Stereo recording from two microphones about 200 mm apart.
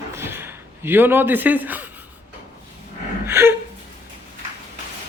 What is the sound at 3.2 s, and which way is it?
Gasp, 15° right (ahead or behind).